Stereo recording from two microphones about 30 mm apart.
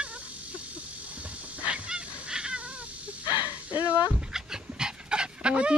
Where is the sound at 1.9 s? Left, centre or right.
Right.